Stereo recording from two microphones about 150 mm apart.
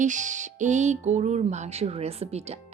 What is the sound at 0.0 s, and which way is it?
Music, 55° right (ahead or behind).